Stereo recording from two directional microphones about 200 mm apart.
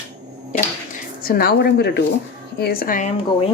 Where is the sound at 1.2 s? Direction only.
50° left (ahead or behind).